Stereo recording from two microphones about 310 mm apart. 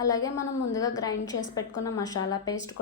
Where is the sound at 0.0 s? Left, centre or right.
Centre.